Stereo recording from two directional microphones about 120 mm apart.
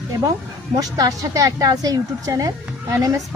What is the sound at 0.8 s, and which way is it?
A woman's voice, 30° right (ahead or behind).